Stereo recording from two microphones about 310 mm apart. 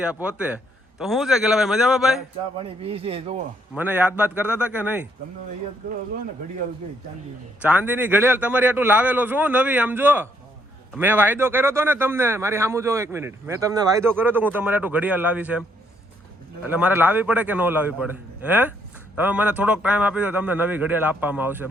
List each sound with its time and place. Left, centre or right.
0.0 s a man's voice: centre
2.6 s speech: centre
3.8 s a man's voice: centre
7.6 s a man's voice: centre
16.6 s a man's voice: centre